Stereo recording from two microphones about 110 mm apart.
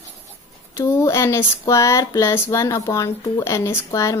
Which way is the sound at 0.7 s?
25° left (ahead or behind).